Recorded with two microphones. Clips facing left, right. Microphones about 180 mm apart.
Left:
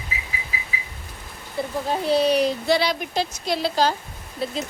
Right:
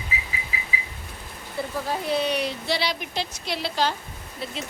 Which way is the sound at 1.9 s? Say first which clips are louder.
Left 6 dB; 35° left (ahead or behind).